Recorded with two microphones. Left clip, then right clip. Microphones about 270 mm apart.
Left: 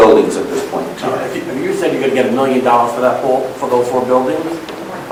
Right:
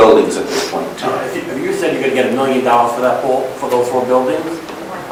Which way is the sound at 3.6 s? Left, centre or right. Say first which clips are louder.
Left 2 dB; centre.